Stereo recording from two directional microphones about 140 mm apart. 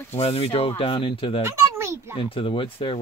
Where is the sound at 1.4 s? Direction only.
20° right (ahead or behind).